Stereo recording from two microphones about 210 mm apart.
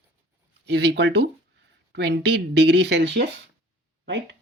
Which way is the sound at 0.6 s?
55° right (ahead or behind).